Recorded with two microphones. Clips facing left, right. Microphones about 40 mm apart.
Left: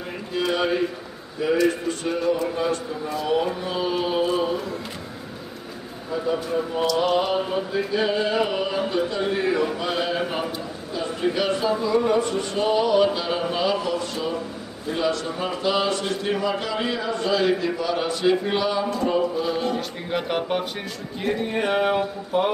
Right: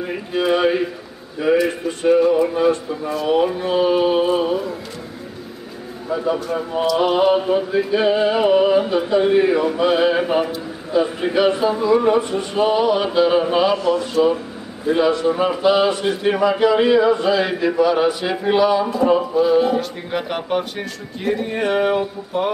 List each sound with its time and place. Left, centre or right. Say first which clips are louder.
0.4 s a sound: right 5 dB; centre
1.4 s a man's voice: right 4 dB; centre
3.5 s music: right 8 dB; centre
6.1 s a man's voice: right 3 dB; centre
14.9 s music: right 8 dB; centre
15.6 s a man's voice: right 6 dB; centre